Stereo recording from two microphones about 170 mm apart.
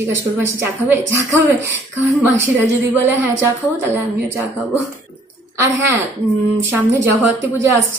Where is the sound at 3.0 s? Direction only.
15° right (ahead or behind).